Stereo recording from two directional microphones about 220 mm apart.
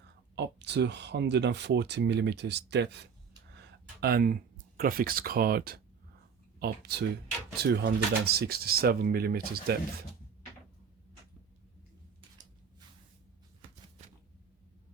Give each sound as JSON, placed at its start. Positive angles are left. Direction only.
{"t": 0.3, "sound": "speech", "side_deg": -50}